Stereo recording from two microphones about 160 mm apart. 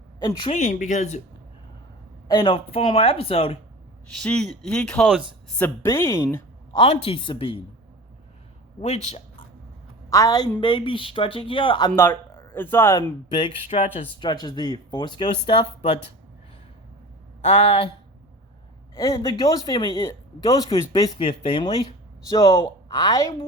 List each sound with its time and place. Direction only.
0.3 s speech: 30° left (ahead or behind)
0.5 s speech: 50° left (ahead or behind)
2.2 s speech: 25° left (ahead or behind)
4.2 s a man's voice: 5° left (ahead or behind); by 6.8 s 20° left (ahead or behind)
6.8 s speech: 40° left (ahead or behind)
8.8 s speech: 45° left (ahead or behind)
10.1 s speech: 20° left (ahead or behind)
11.9 s speech: 15° left (ahead or behind)
13.3 s speech: 30° left (ahead or behind)
17.4 s speech: 40° left (ahead or behind)
18.9 s speech: 20° left (ahead or behind)